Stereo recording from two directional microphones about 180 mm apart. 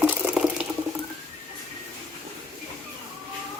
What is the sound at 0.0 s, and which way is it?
Water, 5° right (ahead or behind).